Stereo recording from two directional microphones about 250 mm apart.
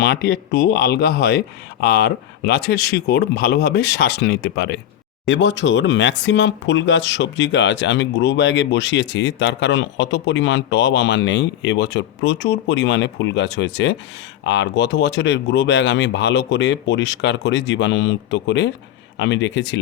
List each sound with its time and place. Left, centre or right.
0.0 s speech: left